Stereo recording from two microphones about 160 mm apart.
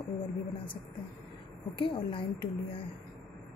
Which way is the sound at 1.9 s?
30° left (ahead or behind).